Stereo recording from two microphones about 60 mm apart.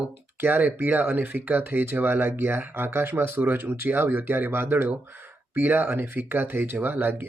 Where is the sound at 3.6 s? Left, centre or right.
Right.